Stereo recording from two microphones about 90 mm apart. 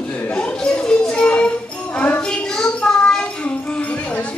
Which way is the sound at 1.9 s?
15° left (ahead or behind).